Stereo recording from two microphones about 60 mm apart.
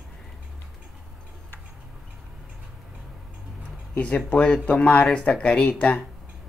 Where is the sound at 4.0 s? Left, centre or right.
Centre.